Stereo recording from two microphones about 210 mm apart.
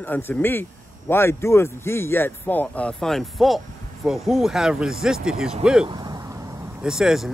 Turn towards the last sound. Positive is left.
turn(degrees=0)  # may be behind; listen again after turning